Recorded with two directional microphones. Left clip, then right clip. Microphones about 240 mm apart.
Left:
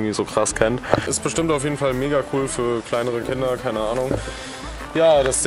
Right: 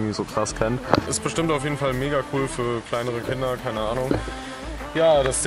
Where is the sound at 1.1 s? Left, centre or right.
Centre.